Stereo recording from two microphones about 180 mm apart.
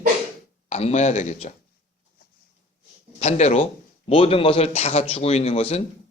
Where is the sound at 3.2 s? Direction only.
35° left (ahead or behind).